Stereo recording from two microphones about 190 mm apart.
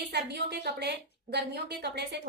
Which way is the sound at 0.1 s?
60° right (ahead or behind).